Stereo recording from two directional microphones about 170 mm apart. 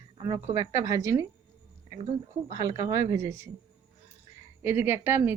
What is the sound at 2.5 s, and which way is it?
Speech, 20° right (ahead or behind).